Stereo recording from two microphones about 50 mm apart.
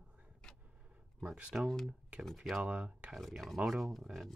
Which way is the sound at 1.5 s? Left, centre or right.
Centre.